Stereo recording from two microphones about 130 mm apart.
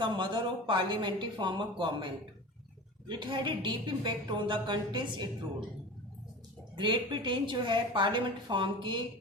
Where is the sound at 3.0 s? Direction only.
40° right (ahead or behind).